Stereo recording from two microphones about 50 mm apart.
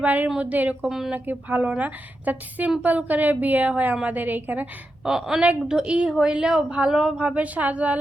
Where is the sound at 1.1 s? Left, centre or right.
Right.